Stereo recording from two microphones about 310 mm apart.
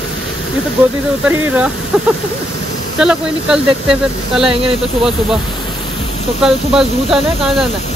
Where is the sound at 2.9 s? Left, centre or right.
Centre.